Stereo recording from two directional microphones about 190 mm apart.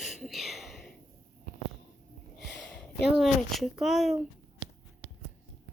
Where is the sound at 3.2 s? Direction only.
Centre (ahead or behind).